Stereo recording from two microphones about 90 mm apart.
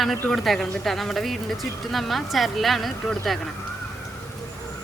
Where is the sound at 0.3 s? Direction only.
5° left (ahead or behind).